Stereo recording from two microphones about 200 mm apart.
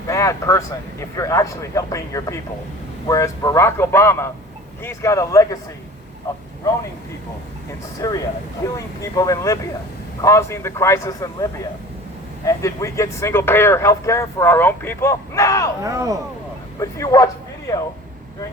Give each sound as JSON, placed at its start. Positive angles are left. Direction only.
{"t": 0.1, "sound": "speech", "side_deg": 15}
{"t": 7.9, "sound": "speech", "side_deg": 15}
{"t": 12.5, "sound": "speech", "side_deg": 15}
{"t": 15.8, "sound": "speech", "side_deg": -15}
{"t": 16.8, "sound": "speech", "side_deg": 15}